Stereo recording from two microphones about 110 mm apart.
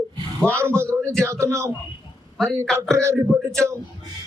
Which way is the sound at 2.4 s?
5° left (ahead or behind).